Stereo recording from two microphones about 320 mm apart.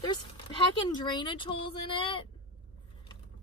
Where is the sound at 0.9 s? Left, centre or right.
Centre.